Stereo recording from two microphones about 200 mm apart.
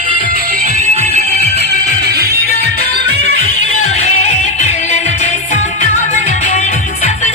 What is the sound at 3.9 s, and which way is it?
Music, 35° left (ahead or behind).